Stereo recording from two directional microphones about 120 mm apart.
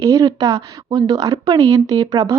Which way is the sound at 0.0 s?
30° right (ahead or behind).